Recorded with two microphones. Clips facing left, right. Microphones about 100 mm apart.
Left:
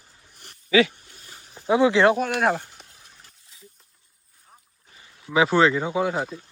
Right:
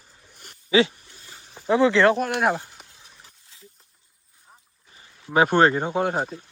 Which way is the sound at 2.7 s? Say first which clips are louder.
Right 1 dB; 20° right (ahead or behind).